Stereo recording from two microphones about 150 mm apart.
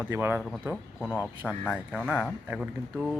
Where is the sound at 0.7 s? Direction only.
5° left (ahead or behind).